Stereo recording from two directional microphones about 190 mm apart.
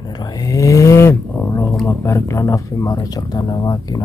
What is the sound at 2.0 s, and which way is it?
Speech, 15° left (ahead or behind).